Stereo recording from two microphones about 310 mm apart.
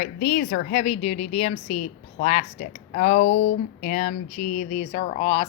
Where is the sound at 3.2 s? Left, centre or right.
Left.